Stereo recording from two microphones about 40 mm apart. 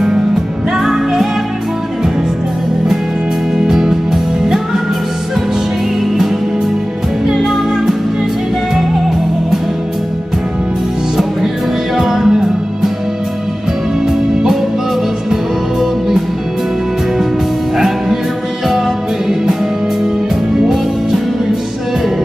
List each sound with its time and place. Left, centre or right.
0.7 s music: centre
3.5 s music: centre
7.2 s music: centre
12.0 s music: centre